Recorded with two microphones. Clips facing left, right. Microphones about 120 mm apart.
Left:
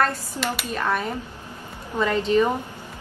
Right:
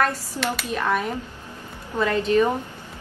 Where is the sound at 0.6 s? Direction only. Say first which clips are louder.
Right 2 dB; centre (ahead or behind).